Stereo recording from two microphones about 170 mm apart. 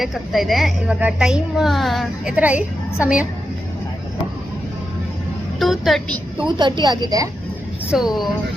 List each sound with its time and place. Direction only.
0.0 s a woman's voice: centre (ahead or behind)
5.5 s vehicle: centre (ahead or behind)
6.6 s a woman's voice: 25° right (ahead or behind)
7.9 s a woman's voice: centre (ahead or behind)